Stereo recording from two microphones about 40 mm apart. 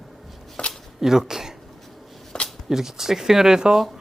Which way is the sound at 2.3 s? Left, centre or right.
Left.